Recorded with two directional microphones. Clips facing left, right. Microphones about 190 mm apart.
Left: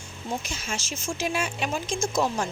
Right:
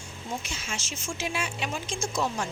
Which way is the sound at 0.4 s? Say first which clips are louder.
Left 3 dB; 40° left (ahead or behind).